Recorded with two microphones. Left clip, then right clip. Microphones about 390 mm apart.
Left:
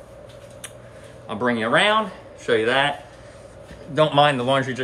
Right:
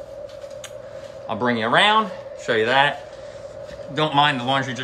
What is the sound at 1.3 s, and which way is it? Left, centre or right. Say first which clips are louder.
Speech: right 1 dB; centre.